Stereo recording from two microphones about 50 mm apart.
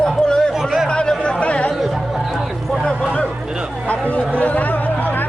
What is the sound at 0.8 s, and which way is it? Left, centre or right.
Chatter, centre.